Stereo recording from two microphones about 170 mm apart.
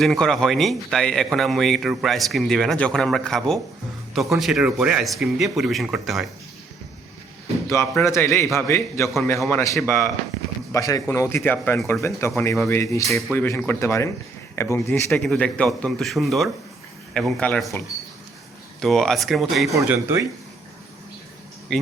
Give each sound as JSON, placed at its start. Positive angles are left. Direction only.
{"t": 0.0, "sound": "speech", "side_deg": 0}
{"t": 7.7, "sound": "speech", "side_deg": 15}
{"t": 15.1, "sound": "speech", "side_deg": 5}
{"t": 18.8, "sound": "speech", "side_deg": 0}
{"t": 19.7, "sound": "speech", "side_deg": -15}
{"t": 21.7, "sound": "speech", "side_deg": 5}